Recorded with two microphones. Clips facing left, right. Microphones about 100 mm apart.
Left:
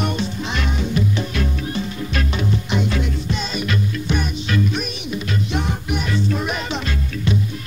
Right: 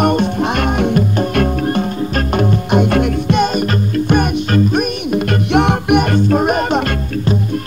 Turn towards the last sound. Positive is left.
turn(degrees=-50)  # may be behind; listen again after turning